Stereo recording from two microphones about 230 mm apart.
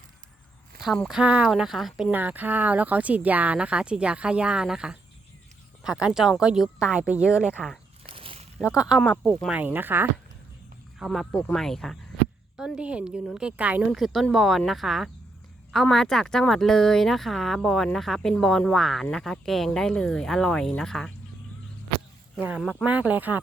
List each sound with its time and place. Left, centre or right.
0.8 s speech: centre
8.0 s a sound: right
8.5 s speech: centre
22.4 s speech: centre